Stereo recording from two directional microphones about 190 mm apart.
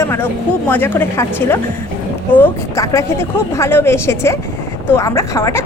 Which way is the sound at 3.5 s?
15° left (ahead or behind).